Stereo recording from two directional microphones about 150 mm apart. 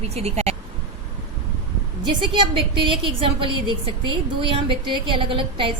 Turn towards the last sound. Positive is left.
turn(degrees=-35)  # may be behind; listen again after turning